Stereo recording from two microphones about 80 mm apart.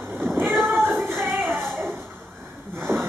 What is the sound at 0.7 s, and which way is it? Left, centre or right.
Music, centre.